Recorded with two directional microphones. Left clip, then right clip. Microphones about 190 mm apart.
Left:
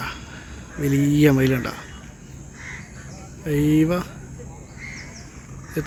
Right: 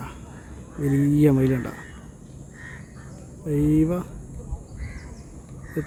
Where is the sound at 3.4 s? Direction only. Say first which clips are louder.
Left 2 dB; 5° right (ahead or behind).